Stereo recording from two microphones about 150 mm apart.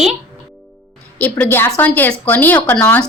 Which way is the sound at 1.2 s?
10° left (ahead or behind).